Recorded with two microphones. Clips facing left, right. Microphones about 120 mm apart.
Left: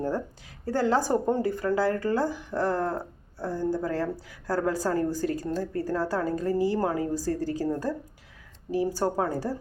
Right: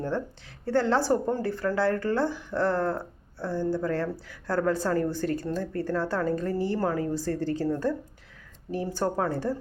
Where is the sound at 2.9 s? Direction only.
40° left (ahead or behind).